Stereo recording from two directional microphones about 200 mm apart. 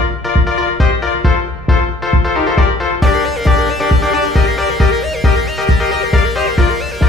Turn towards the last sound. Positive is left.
turn(degrees=0)  # may be behind; listen again after turning